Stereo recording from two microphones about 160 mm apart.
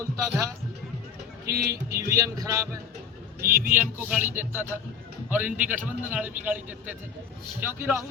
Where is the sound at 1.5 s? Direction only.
75° right (ahead or behind).